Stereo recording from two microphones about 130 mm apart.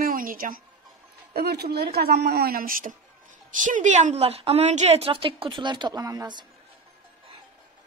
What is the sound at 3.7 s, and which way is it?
A woman's voice, 75° right (ahead or behind).